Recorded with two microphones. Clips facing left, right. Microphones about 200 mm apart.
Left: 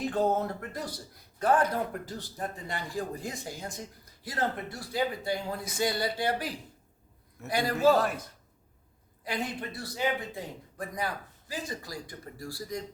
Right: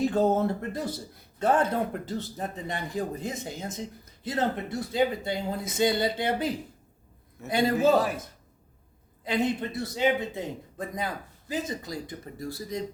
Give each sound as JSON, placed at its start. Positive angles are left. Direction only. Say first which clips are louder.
{"t": 0.2, "sound": "speech", "louder": "even", "side_deg": -30}
{"t": 7.9, "sound": "a man's voice", "louder": "right 3 dB", "side_deg": 0}
{"t": 9.2, "sound": "speech", "louder": "right 7 dB", "side_deg": -20}